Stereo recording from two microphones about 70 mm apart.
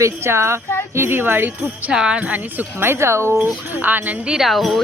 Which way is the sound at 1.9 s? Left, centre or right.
Centre.